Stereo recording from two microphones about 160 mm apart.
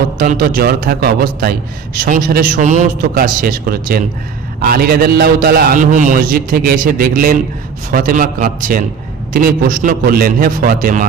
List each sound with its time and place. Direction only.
0.2 s a man's voice: 60° right (ahead or behind)
2.0 s a man's voice: 60° right (ahead or behind)